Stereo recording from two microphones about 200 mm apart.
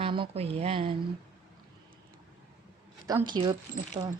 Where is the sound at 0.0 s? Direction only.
25° right (ahead or behind).